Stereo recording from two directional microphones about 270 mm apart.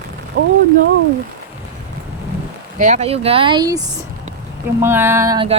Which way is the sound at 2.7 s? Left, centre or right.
Right.